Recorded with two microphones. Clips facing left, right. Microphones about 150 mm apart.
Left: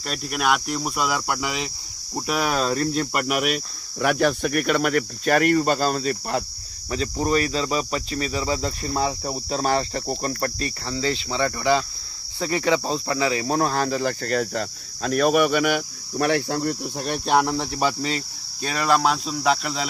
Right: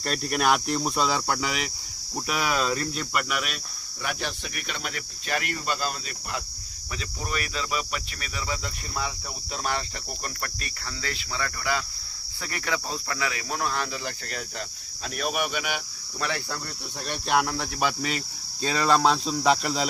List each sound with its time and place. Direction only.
0.1 s cricket: centre (ahead or behind); by 1.7 s 20° left (ahead or behind)
2.5 s speech: 40° left (ahead or behind)
6.9 s cricket: 35° left (ahead or behind); by 16.6 s 55° left (ahead or behind)
16.6 s speech: 45° left (ahead or behind)
17.4 s speech: 25° left (ahead or behind)
18.7 s speech: 10° left (ahead or behind)